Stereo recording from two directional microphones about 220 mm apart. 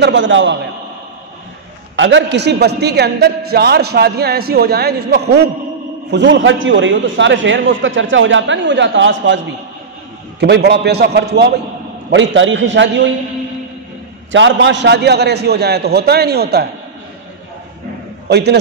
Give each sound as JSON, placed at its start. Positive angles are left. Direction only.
{"t": 0.0, "sound": "a man's voice", "side_deg": -55}
{"t": 2.0, "sound": "a man's voice", "side_deg": -55}
{"t": 10.4, "sound": "a man's voice", "side_deg": -50}
{"t": 14.3, "sound": "a man's voice", "side_deg": -55}
{"t": 18.3, "sound": "a man's voice", "side_deg": -50}